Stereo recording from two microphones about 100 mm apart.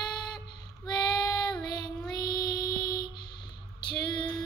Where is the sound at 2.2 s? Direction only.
45° left (ahead or behind).